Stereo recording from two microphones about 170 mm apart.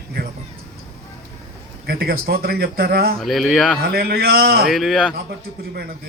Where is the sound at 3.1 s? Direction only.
Centre (ahead or behind).